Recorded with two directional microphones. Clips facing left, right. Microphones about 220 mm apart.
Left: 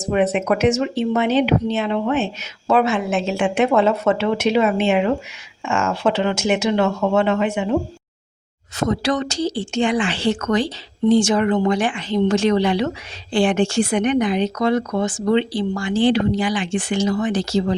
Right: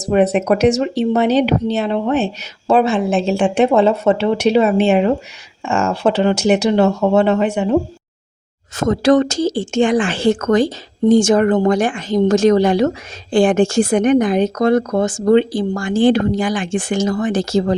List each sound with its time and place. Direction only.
0.0 s speech: 40° right (ahead or behind)
8.7 s speech: 45° right (ahead or behind)